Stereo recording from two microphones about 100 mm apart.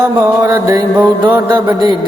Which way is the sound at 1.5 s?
45° right (ahead or behind).